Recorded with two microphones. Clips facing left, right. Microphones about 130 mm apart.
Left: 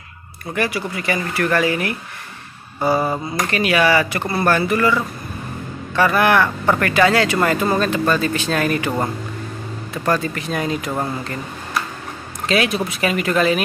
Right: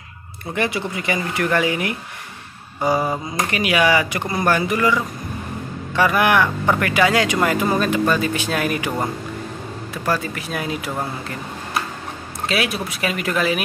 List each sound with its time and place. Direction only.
0.6 s speech: 20° right (ahead or behind)
10.0 s speech: 5° right (ahead or behind)
12.4 s speech: 5° right (ahead or behind)